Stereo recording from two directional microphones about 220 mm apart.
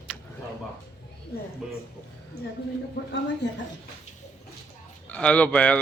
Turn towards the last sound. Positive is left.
turn(degrees=5)  # may be behind; listen again after turning